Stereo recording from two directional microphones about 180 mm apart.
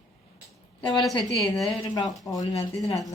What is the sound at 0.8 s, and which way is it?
Speech, 25° left (ahead or behind).